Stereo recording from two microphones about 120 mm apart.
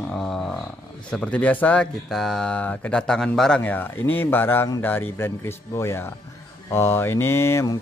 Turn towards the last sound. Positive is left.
turn(degrees=20)  # may be behind; listen again after turning